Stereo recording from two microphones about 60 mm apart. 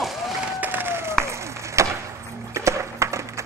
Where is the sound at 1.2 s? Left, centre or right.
Right.